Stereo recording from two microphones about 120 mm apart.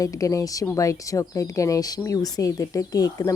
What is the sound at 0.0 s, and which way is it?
Speech, 30° left (ahead or behind).